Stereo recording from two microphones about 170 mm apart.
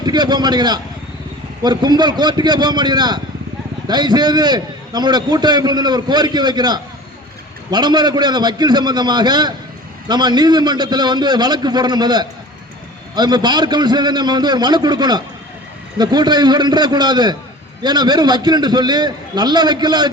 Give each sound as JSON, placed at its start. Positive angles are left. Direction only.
{"t": 0.0, "sound": "a man's voice", "side_deg": -25}